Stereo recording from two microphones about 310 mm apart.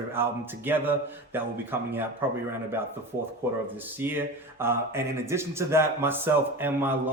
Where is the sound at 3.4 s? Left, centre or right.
Centre.